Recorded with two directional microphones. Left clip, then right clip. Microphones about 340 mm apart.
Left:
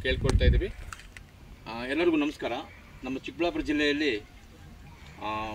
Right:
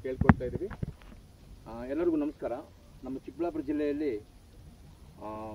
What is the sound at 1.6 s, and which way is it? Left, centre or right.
Speech, right.